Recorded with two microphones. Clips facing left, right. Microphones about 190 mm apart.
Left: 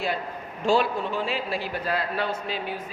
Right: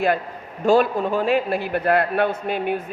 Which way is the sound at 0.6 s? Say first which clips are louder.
Right 6 dB; 50° right (ahead or behind).